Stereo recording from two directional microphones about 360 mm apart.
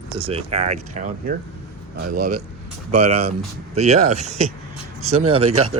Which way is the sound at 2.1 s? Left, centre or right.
Right.